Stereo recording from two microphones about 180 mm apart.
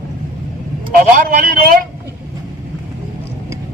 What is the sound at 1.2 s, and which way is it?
Speech, 55° right (ahead or behind).